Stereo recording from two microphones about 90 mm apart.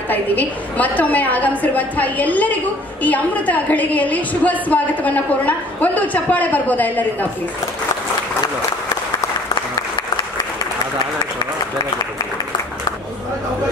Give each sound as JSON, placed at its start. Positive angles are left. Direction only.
{"t": 0.1, "sound": "a woman's voice", "side_deg": 20}